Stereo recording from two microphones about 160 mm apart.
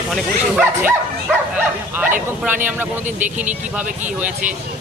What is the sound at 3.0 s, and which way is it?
Speech, 50° right (ahead or behind).